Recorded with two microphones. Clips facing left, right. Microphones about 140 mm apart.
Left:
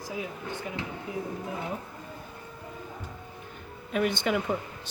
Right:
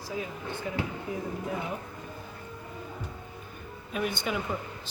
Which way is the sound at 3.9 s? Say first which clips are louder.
Left 4 dB; 80° left.